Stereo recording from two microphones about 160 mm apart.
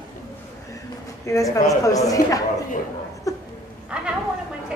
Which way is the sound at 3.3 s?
20° left (ahead or behind).